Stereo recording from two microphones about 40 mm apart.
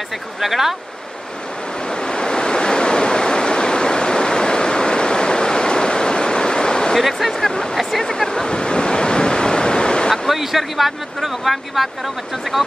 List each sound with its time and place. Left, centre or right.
0.4 s speech: centre
2.0 s waves: left
7.0 s speech: centre
8.0 s waves: centre
10.3 s speech: centre